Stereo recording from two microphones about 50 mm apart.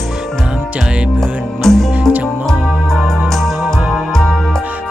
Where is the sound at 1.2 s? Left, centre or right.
Centre.